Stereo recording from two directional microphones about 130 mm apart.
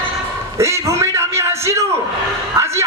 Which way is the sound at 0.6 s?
20° right (ahead or behind).